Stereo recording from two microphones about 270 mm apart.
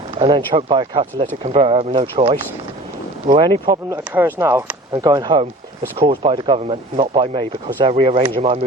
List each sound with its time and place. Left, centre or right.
0.1 s speech: centre